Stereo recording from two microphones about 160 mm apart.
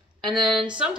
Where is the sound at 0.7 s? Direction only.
5° right (ahead or behind).